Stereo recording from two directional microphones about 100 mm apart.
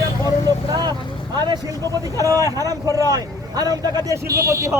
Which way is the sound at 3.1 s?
40° right (ahead or behind).